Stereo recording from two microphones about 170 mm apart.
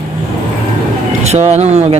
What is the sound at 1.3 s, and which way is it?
Speech, 40° right (ahead or behind).